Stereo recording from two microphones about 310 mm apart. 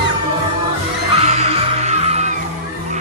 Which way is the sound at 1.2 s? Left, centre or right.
Centre.